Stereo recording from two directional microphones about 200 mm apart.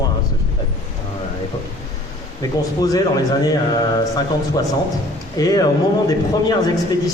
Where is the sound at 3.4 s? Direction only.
20° left (ahead or behind).